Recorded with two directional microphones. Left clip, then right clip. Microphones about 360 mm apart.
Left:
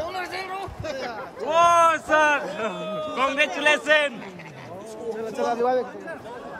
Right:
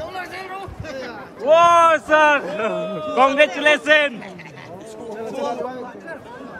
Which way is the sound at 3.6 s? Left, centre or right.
Centre.